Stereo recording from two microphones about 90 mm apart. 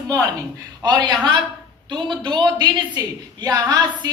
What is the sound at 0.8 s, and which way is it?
A woman's voice, 55° right (ahead or behind).